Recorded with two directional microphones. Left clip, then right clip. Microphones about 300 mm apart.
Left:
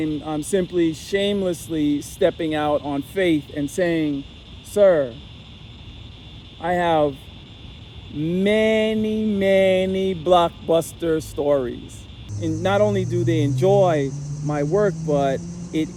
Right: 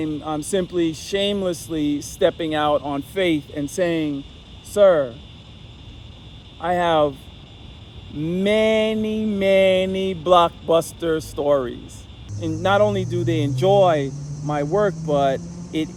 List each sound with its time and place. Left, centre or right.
0.0 s mantra: centre
6.6 s mantra: centre
8.2 s mantra: centre
15.1 s speech: centre